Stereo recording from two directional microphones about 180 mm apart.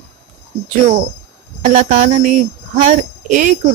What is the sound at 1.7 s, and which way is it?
Speech, 40° right (ahead or behind).